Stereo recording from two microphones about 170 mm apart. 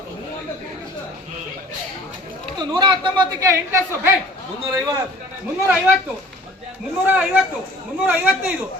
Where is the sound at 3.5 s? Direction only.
15° right (ahead or behind).